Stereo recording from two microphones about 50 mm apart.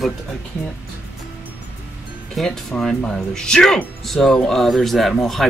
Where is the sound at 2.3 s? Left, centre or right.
Centre.